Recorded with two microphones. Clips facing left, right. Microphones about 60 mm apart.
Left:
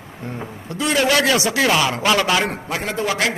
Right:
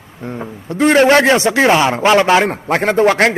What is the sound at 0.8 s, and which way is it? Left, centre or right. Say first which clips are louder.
A man's voice: right 8 dB; right.